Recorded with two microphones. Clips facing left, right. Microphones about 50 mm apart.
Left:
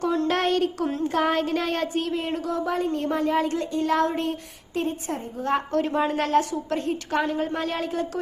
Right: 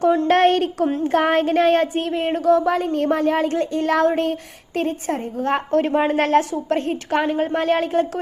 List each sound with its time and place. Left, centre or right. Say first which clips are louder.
0.0 s a woman's voice: right 7 dB; right
0.3 s a woman's voice: right 6 dB; right
0.8 s a sound: right 6 dB; right
1.0 s a woman's voice: right 5 dB; right